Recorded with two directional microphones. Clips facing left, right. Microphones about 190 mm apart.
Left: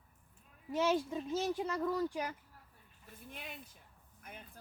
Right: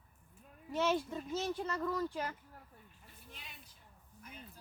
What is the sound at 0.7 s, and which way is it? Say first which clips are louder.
Speech: left 1 dB; 10° left (ahead or behind).